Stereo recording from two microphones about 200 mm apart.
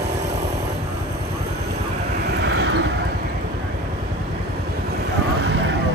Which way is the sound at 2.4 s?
65° right (ahead or behind).